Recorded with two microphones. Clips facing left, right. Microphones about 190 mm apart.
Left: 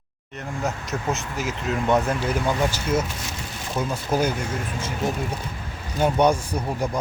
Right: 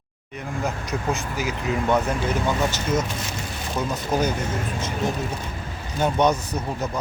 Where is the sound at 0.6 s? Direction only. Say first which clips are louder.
Even; centre (ahead or behind).